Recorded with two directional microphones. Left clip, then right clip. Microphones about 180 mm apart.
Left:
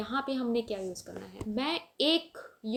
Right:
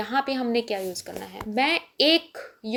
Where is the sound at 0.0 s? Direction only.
25° right (ahead or behind).